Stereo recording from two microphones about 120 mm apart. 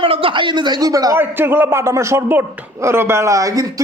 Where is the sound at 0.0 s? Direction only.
50° right (ahead or behind); by 1.2 s 30° right (ahead or behind).